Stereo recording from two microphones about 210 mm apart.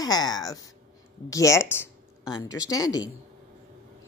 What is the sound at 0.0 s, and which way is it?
A woman's voice, 20° left (ahead or behind).